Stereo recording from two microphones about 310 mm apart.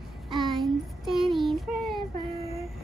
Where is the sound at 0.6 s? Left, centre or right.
Centre.